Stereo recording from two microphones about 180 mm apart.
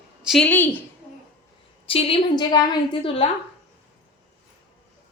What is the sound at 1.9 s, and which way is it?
A woman's voice, 30° left (ahead or behind).